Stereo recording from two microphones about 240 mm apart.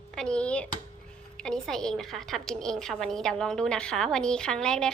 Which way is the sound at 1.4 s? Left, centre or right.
Centre.